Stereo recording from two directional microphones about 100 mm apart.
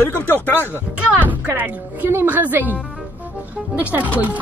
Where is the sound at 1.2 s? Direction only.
20° right (ahead or behind).